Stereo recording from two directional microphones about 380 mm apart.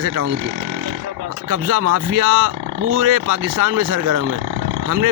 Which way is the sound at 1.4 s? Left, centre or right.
Right.